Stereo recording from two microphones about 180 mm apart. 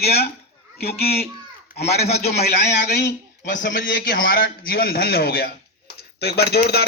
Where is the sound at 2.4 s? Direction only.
65° left (ahead or behind).